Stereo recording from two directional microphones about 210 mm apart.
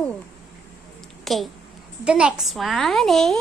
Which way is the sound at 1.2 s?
Centre (ahead or behind).